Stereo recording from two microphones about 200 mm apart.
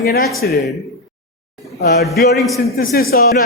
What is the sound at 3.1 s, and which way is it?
Speech, 50° left (ahead or behind).